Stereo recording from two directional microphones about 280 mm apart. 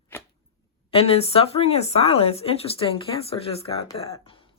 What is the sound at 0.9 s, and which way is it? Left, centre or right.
Speech, left.